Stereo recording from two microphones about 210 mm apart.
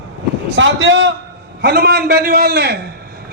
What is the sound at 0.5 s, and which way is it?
Speech, 60° right (ahead or behind).